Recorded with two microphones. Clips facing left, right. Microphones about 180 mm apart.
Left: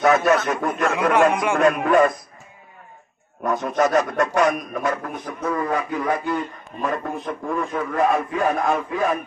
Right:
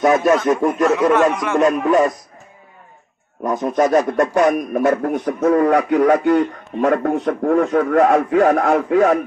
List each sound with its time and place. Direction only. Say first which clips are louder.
0.0 s speech: right 3 dB; 15° right (ahead or behind)
0.9 s a man's voice: right 3 dB; 10° left (ahead or behind)
3.4 s speech: right 3 dB; 30° right (ahead or behind)
4.4 s a man's voice: right 5 dB; 50° right (ahead or behind)
5.6 s a man's voice: right 10 dB; 70° right (ahead or behind)